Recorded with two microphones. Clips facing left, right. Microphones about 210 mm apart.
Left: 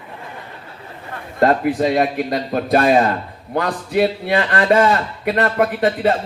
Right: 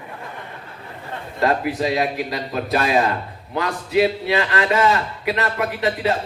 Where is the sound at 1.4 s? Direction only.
50° left (ahead or behind).